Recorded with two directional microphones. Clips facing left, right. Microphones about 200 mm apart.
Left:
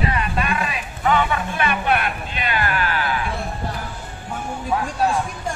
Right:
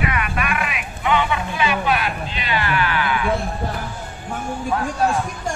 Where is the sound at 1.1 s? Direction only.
50° left (ahead or behind).